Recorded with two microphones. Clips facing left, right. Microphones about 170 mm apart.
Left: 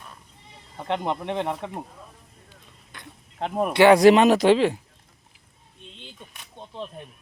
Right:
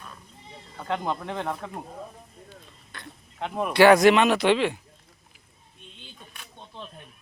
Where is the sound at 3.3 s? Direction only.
35° left (ahead or behind).